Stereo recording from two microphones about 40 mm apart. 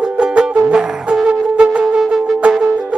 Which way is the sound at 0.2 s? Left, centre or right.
Right.